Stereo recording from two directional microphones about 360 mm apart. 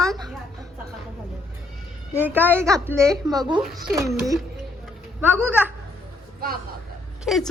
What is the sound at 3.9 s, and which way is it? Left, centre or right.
A woman's voice, centre.